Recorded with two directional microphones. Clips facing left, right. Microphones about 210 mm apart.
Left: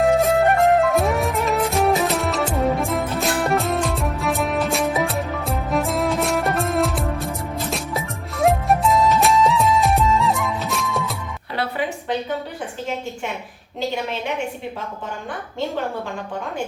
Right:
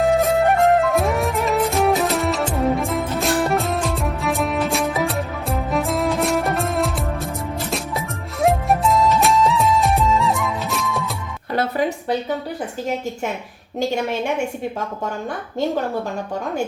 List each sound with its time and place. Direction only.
0.0 s music: centre (ahead or behind)
11.5 s music: 40° right (ahead or behind)
13.7 s a woman's voice: 45° right (ahead or behind)